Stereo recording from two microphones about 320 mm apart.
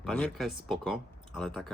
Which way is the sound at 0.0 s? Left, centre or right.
Centre.